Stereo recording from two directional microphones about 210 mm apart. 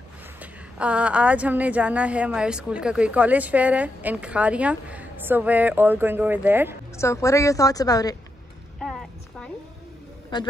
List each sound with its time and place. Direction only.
0.4 s a woman's voice: 5° right (ahead or behind)
7.0 s a woman's voice: 15° left (ahead or behind)
10.3 s a man's voice: 20° left (ahead or behind)